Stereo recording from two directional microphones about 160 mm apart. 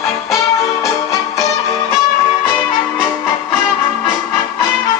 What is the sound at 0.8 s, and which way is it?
Music, 20° left (ahead or behind).